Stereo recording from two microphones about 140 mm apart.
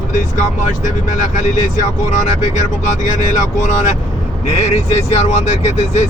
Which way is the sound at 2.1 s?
60° left (ahead or behind).